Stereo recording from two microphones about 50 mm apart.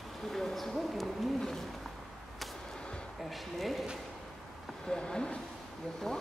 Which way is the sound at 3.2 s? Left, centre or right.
Centre.